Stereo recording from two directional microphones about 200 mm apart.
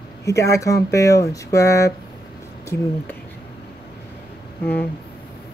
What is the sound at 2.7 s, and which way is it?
Speech, 55° left (ahead or behind).